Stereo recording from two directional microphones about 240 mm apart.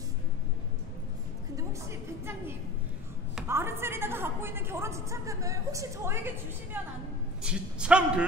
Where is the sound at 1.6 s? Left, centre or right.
Centre.